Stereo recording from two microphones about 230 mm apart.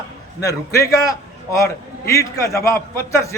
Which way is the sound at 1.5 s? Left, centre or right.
Centre.